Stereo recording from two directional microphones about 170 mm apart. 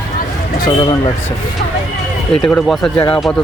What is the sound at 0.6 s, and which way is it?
Speech, 25° left (ahead or behind).